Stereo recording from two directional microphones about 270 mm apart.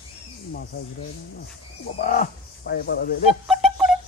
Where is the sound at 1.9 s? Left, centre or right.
Left.